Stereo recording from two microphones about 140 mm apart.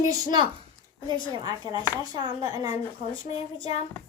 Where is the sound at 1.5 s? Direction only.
30° right (ahead or behind).